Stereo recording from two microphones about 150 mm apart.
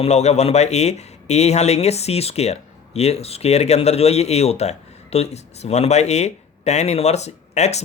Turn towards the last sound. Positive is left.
turn(degrees=45)  # may be behind; listen again after turning